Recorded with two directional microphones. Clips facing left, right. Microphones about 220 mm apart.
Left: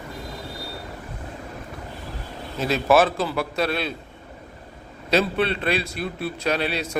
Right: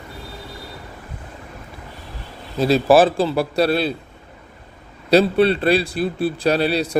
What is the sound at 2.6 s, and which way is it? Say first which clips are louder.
A man's voice: right 5 dB; 35° right (ahead or behind).